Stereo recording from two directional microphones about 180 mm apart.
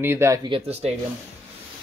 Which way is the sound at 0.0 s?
15° right (ahead or behind).